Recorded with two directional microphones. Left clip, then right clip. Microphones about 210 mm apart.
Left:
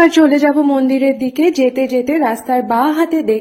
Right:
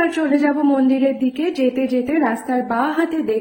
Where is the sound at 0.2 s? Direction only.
35° left (ahead or behind).